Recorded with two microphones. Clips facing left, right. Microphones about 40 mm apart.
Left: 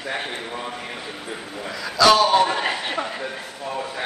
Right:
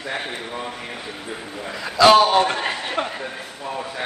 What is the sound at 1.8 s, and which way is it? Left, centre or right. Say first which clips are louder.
Speech: right 3 dB; right.